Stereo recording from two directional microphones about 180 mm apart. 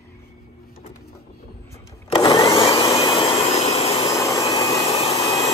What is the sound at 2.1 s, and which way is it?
Vacuum cleaner, 20° left (ahead or behind).